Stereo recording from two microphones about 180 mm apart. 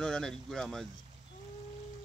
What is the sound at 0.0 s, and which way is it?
Speech, 5° left (ahead or behind).